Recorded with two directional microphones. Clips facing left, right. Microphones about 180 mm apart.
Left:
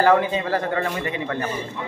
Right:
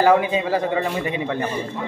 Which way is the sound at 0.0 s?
15° right (ahead or behind).